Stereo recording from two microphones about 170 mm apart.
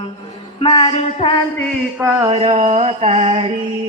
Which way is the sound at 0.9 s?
35° left (ahead or behind).